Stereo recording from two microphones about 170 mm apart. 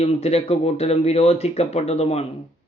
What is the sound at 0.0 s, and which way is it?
A man's voice, 35° left (ahead or behind).